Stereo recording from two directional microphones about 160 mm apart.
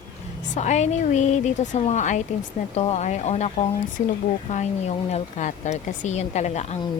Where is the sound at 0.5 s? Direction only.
45° left (ahead or behind).